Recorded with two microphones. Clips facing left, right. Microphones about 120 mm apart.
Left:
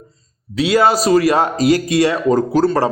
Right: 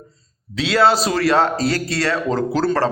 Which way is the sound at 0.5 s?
10° left (ahead or behind).